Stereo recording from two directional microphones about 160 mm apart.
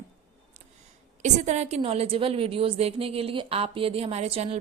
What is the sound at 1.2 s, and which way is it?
A woman's voice, 45° right (ahead or behind).